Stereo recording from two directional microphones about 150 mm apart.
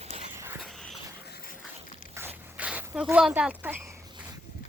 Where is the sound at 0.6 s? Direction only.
Centre (ahead or behind).